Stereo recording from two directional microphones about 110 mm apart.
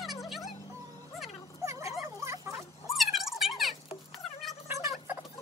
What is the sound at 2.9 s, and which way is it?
Music, centre (ahead or behind).